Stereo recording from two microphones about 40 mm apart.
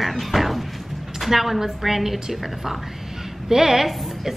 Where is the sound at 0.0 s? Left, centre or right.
Centre.